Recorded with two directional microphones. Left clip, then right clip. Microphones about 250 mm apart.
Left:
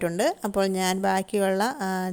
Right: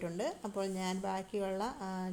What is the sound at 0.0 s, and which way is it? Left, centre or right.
A woman's voice, left.